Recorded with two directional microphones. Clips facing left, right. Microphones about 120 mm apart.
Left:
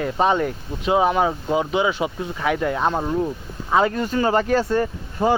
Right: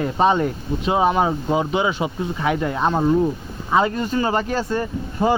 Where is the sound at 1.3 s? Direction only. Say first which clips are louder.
Right 1 dB; centre (ahead or behind).